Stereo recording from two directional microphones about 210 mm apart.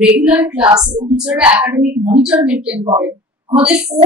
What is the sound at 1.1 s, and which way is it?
Speech, 5° right (ahead or behind).